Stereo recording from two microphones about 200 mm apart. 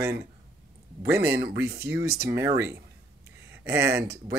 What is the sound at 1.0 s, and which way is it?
Speech, 10° right (ahead or behind).